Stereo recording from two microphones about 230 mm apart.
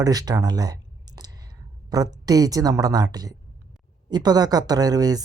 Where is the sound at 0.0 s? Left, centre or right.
Centre.